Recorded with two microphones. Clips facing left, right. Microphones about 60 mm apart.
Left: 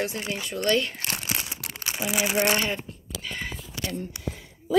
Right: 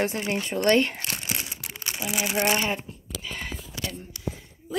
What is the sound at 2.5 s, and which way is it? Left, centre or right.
Speech, centre.